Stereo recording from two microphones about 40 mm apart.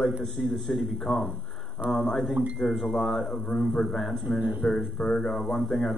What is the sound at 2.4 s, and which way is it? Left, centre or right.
Speech, right.